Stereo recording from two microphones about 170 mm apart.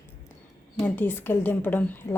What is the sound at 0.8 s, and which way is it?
A woman's voice, 10° left (ahead or behind).